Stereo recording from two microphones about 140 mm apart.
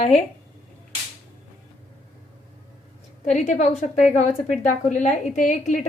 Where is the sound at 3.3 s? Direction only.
60° left (ahead or behind).